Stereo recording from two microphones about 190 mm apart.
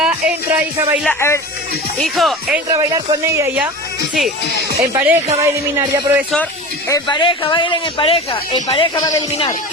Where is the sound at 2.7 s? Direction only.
20° right (ahead or behind).